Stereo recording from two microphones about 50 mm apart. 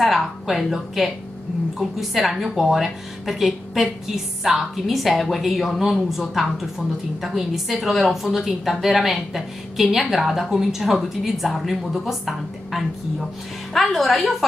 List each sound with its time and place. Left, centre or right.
0.0 s a woman's voice: centre